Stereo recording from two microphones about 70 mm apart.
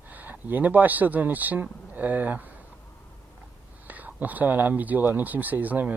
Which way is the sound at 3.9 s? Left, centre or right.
Right.